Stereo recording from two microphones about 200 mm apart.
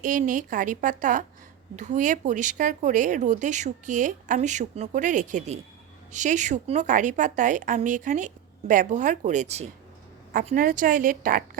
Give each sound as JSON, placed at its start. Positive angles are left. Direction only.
{"t": 0.0, "sound": "a woman's voice", "side_deg": -40}